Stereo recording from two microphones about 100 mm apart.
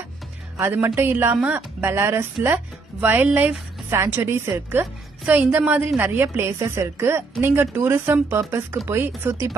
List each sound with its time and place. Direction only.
0.6 s a woman's voice: 20° right (ahead or behind)
3.9 s a woman's voice: 25° right (ahead or behind)